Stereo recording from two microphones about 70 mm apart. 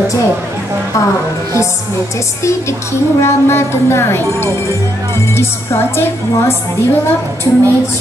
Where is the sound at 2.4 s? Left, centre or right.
Left.